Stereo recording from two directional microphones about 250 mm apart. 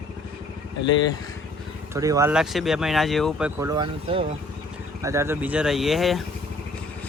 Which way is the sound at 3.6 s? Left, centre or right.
Centre.